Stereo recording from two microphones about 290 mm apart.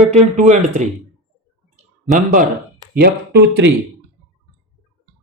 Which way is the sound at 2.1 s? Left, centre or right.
Right.